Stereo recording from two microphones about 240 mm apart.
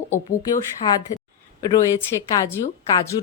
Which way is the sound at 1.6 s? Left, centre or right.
Centre.